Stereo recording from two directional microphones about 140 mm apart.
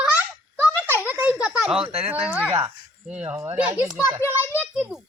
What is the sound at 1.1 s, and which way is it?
Baby laughter, 15° right (ahead or behind).